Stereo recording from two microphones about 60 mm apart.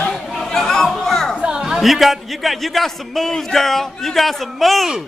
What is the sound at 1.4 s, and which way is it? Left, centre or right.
A man's voice, centre.